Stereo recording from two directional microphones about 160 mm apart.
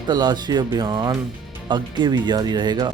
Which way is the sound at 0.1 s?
25° right (ahead or behind).